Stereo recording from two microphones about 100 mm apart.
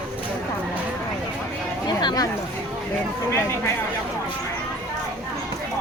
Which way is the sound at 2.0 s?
40° left (ahead or behind).